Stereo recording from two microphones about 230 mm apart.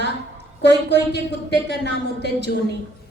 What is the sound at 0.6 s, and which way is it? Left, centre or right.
Speech, left.